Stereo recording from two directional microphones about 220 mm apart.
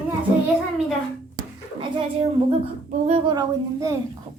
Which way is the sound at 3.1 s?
20° right (ahead or behind).